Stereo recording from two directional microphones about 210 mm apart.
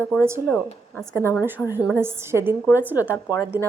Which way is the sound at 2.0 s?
10° right (ahead or behind).